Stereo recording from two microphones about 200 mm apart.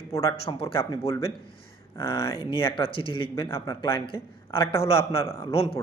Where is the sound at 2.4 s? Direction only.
25° left (ahead or behind).